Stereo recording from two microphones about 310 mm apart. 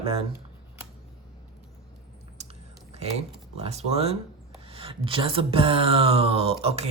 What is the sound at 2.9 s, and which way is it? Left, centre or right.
Speech, centre.